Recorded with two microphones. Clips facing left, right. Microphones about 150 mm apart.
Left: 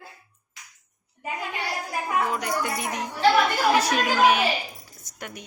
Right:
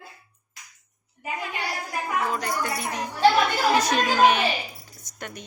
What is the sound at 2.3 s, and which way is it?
Music, 15° left (ahead or behind).